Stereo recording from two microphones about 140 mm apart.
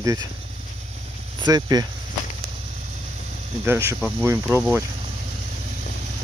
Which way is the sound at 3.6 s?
20° right (ahead or behind).